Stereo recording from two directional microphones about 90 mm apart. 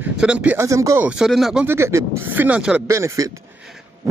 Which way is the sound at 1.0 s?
10° right (ahead or behind).